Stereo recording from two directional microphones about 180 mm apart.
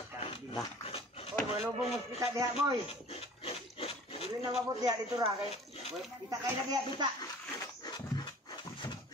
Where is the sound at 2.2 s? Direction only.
20° right (ahead or behind).